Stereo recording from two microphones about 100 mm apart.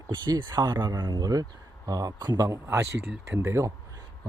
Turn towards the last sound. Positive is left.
turn(degrees=-30)  # may be behind; listen again after turning